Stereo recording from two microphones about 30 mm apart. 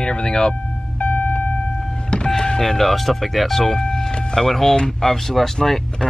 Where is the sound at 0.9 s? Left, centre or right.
Left.